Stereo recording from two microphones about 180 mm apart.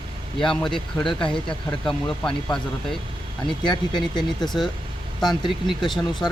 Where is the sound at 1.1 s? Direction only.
25° left (ahead or behind).